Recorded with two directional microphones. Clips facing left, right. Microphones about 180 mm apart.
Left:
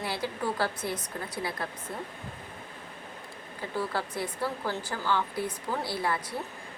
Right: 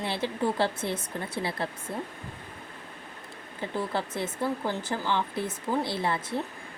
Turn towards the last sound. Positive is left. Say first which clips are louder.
# right 2 dB
turn(degrees=-25)  # may be behind; listen again after turning